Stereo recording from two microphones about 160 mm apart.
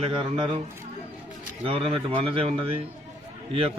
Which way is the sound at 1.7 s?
35° right (ahead or behind).